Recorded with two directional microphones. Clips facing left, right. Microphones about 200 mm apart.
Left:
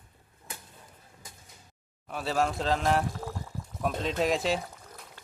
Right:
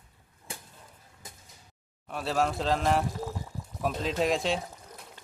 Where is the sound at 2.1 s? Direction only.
Centre (ahead or behind).